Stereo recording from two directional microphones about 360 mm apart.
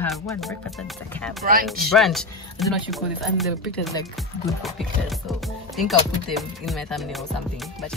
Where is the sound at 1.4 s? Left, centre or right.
Right.